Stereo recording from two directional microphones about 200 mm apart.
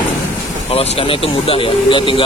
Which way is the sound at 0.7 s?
30° left (ahead or behind).